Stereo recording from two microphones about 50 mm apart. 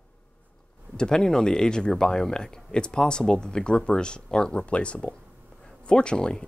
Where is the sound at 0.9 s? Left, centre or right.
Centre.